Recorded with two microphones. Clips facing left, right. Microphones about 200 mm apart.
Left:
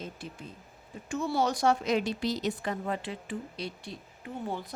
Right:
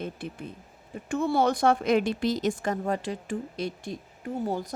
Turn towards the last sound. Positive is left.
turn(degrees=-40)  # may be behind; listen again after turning